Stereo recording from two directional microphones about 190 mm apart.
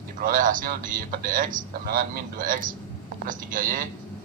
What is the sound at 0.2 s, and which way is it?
A man's voice, 45° right (ahead or behind).